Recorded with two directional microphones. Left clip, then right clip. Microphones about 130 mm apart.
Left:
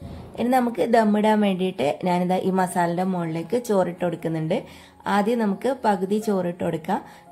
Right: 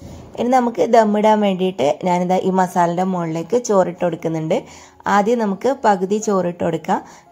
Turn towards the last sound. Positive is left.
turn(degrees=-25)  # may be behind; listen again after turning